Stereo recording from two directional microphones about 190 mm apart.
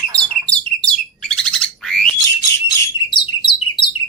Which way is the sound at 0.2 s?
5° left (ahead or behind).